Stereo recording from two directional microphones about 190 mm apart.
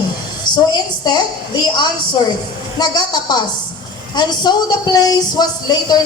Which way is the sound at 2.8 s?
20° left (ahead or behind).